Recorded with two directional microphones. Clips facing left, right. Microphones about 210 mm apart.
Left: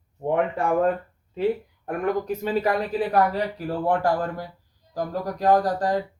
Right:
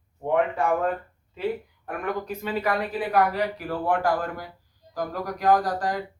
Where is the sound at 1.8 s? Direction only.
40° left (ahead or behind).